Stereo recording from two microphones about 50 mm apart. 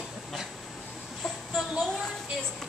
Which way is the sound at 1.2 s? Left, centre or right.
Centre.